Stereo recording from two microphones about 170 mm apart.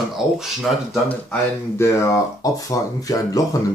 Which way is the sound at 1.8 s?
15° left (ahead or behind).